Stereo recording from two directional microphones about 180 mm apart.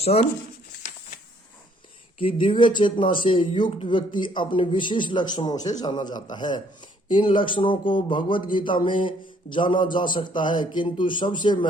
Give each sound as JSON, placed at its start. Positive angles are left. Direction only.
{"t": 0.0, "sound": "speech", "side_deg": 35}
{"t": 2.1, "sound": "speech", "side_deg": 30}